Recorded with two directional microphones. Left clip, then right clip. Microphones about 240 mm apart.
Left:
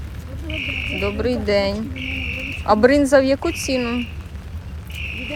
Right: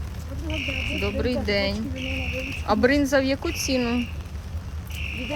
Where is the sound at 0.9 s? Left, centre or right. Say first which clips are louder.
Left 5 dB; centre.